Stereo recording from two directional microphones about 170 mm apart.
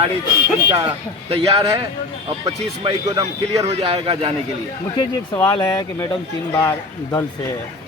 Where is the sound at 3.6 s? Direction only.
40° right (ahead or behind).